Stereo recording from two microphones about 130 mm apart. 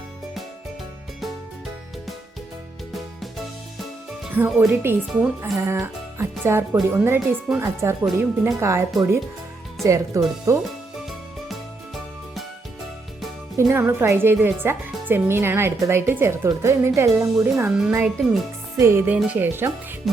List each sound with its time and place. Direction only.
2.9 s music: centre (ahead or behind)
4.4 s speech: 10° right (ahead or behind)
13.6 s a woman's voice: 20° right (ahead or behind)
17.3 s a woman's voice: 10° right (ahead or behind)
18.8 s a woman's voice: 20° right (ahead or behind)